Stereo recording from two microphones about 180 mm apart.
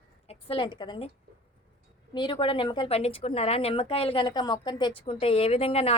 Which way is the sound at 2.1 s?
25° left (ahead or behind).